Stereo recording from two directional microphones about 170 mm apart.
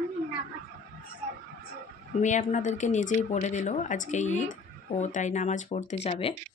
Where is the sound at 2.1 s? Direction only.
45° left (ahead or behind).